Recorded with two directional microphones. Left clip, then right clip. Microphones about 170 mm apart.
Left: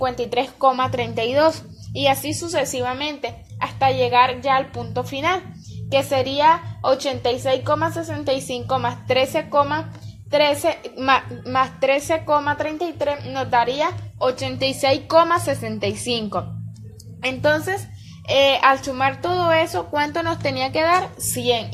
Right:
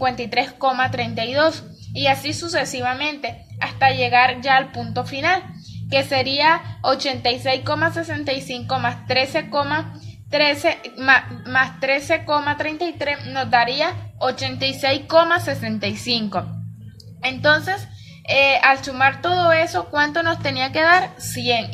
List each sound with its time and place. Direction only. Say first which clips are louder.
0.0 s a woman's voice: right 1 dB; 20° left (ahead or behind)
17.2 s a woman's voice: right 2 dB; 40° left (ahead or behind); by 21.1 s 20° left (ahead or behind)